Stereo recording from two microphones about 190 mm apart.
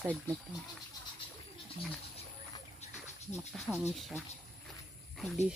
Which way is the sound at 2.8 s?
35° left (ahead or behind).